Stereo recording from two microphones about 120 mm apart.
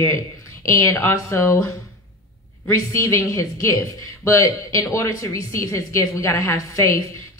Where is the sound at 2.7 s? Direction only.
25° left (ahead or behind).